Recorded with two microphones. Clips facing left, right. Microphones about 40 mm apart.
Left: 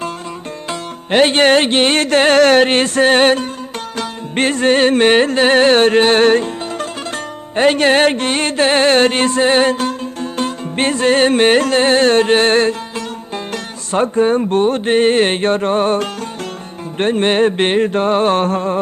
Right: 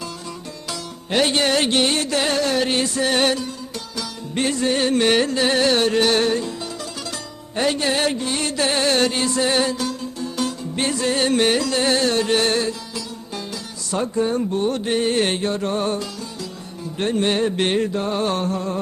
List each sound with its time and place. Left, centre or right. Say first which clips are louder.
0.7 s music: left 7 dB; left